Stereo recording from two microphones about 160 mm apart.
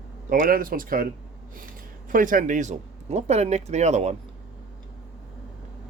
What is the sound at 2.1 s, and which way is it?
Speech, 55° right (ahead or behind).